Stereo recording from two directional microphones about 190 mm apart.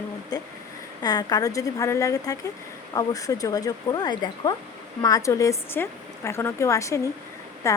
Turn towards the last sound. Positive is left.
turn(degrees=15)  # may be behind; listen again after turning